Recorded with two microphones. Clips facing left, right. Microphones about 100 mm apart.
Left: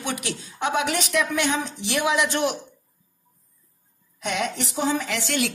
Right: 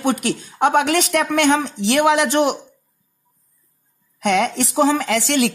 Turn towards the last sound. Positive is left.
turn(degrees=-80)